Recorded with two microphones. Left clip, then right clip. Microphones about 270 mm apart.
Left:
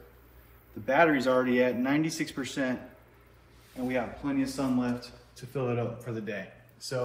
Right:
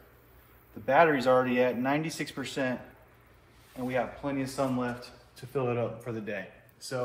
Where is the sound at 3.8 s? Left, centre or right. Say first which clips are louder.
Right 1 dB; right.